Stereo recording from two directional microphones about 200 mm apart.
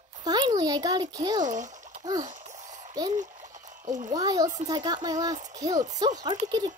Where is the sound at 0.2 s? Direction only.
20° right (ahead or behind).